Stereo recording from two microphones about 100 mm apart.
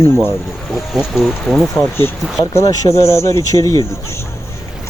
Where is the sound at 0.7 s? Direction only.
5° right (ahead or behind).